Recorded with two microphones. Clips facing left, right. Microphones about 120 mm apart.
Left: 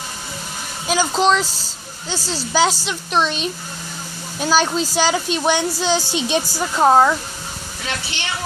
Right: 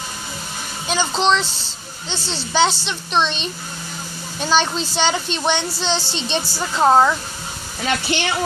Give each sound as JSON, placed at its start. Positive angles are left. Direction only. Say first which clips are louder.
{"t": 0.8, "sound": "a woman's voice", "louder": "left 2 dB", "side_deg": 5}
{"t": 7.8, "sound": "speech", "louder": "right 8 dB", "side_deg": -60}